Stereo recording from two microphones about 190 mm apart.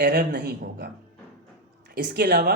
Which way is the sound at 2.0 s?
65° right (ahead or behind).